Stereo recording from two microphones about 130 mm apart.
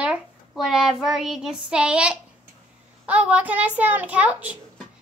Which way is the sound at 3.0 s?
10° right (ahead or behind).